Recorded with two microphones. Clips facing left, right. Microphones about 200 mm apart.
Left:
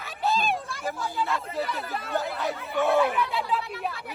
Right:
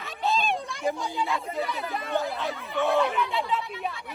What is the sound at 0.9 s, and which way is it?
Speech, 15° right (ahead or behind).